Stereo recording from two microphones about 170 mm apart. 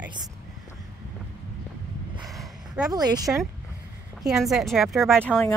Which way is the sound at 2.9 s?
20° right (ahead or behind).